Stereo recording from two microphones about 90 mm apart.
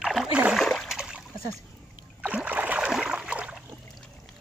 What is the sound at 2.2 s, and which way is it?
Rowboat, 15° right (ahead or behind).